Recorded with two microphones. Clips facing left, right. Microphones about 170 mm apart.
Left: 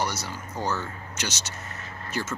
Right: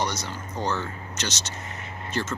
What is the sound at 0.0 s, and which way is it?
Speech, 10° left (ahead or behind).